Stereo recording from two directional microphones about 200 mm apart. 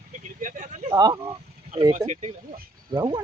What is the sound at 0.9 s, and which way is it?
Speech, 20° right (ahead or behind).